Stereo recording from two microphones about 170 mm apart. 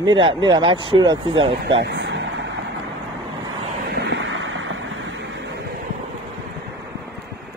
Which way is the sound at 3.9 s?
90° right.